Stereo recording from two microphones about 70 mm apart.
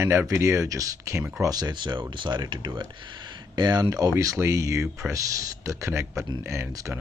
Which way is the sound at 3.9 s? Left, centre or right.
Right.